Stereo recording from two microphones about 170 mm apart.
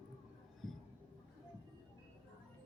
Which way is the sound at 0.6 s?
Centre (ahead or behind).